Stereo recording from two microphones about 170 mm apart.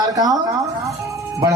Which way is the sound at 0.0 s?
20° right (ahead or behind).